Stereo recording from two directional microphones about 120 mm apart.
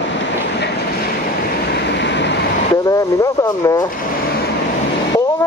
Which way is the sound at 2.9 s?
30° left (ahead or behind).